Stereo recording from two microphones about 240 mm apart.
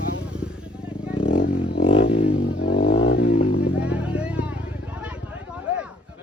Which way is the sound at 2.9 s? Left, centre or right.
Left.